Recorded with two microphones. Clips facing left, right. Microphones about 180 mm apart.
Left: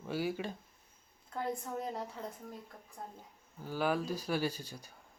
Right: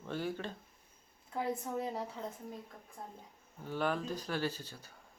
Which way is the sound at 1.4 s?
5° right (ahead or behind).